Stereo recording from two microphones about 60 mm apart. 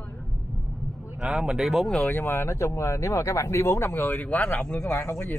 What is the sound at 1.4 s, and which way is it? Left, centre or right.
Speech, centre.